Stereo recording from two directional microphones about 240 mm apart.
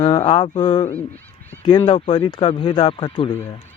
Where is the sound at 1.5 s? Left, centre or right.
Centre.